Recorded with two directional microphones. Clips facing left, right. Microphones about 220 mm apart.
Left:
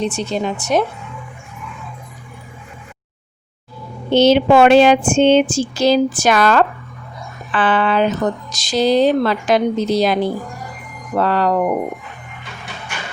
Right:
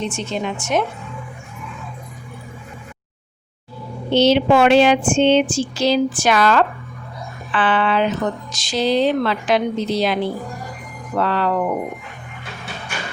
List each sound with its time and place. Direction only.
0.0 s speech: 35° left (ahead or behind)
4.1 s speech: 50° left (ahead or behind)